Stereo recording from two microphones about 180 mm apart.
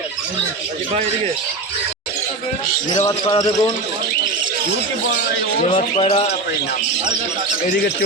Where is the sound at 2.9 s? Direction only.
25° left (ahead or behind).